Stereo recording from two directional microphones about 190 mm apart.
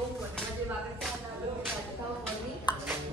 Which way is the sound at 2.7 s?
25° left (ahead or behind).